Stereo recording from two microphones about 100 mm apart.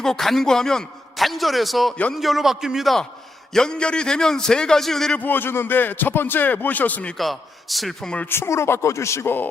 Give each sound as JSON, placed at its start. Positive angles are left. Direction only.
{"t": 0.0, "sound": "a man's voice", "side_deg": 5}
{"t": 5.2, "sound": "speech", "side_deg": 20}
{"t": 7.2, "sound": "a man's voice", "side_deg": 0}
{"t": 8.3, "sound": "speech", "side_deg": 25}